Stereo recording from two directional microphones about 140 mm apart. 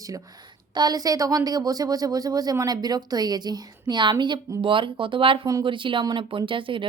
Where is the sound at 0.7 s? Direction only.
30° right (ahead or behind).